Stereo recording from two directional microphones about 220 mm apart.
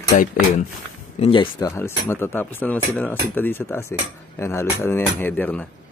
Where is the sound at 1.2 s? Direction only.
20° left (ahead or behind).